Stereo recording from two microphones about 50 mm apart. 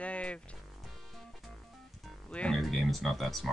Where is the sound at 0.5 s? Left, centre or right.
Centre.